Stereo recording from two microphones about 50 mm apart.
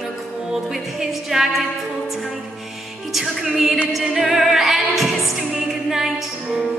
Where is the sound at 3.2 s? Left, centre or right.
Centre.